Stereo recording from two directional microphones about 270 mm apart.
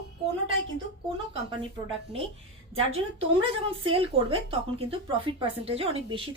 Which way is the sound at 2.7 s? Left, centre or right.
Right.